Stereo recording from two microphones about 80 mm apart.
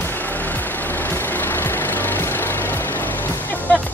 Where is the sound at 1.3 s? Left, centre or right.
Left.